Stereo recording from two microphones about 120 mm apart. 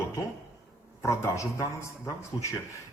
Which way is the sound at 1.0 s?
25° left (ahead or behind).